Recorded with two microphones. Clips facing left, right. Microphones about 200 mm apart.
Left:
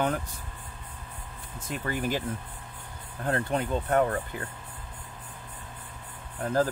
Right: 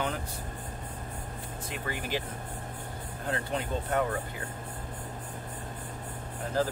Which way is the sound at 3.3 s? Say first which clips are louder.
Left 5 dB; 50° left (ahead or behind).